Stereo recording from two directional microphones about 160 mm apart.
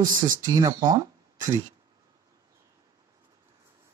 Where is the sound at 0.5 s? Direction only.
25° right (ahead or behind).